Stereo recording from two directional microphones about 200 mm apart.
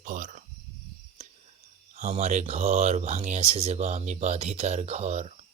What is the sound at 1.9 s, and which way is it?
Speech, 35° right (ahead or behind).